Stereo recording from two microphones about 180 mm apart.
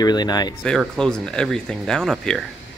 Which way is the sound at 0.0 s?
25° left (ahead or behind).